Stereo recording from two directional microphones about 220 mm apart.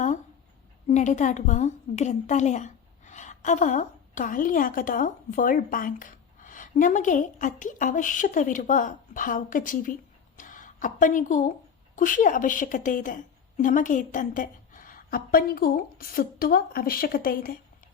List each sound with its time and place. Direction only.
0.9 s a woman's voice: 35° left (ahead or behind)